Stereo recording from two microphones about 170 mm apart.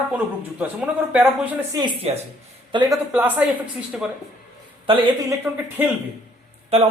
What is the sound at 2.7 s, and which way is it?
Speech, 25° right (ahead or behind).